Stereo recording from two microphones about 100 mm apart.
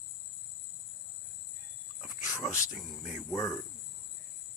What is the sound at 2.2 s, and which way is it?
Cricket, 35° left (ahead or behind).